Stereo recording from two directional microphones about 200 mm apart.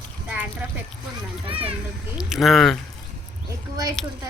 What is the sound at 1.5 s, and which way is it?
Children playing, 30° right (ahead or behind).